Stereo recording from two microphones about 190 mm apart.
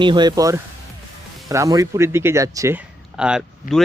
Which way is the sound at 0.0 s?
25° right (ahead or behind).